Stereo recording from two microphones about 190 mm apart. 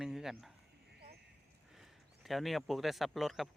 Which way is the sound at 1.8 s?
Centre (ahead or behind).